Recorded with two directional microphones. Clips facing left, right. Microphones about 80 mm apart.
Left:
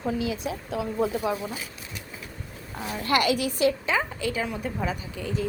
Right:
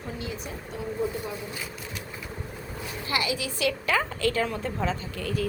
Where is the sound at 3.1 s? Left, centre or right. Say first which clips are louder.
Left 6 dB; left.